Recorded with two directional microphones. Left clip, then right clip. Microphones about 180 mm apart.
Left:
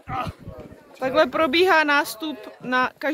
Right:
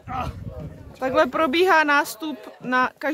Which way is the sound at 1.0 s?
Centre (ahead or behind).